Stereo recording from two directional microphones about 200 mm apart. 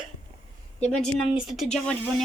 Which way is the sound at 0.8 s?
5° left (ahead or behind).